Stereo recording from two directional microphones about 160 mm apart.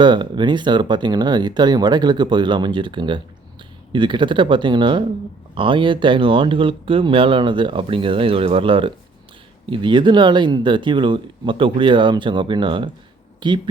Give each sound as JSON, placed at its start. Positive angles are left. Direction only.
{"t": 0.0, "sound": "speech", "side_deg": -30}